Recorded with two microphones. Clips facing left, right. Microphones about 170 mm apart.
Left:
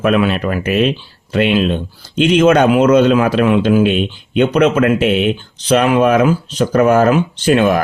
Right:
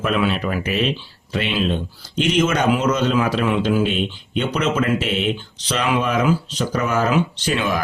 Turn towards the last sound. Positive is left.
turn(degrees=55)  # may be behind; listen again after turning